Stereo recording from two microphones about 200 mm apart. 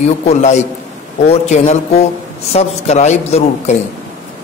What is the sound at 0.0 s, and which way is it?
A man's voice, 35° left (ahead or behind).